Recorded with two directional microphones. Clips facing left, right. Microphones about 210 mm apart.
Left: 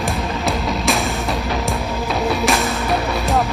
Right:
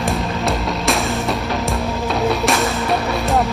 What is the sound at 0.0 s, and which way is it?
Music, centre (ahead or behind).